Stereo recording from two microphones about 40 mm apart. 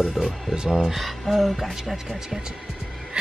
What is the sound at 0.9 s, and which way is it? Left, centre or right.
Speech, centre.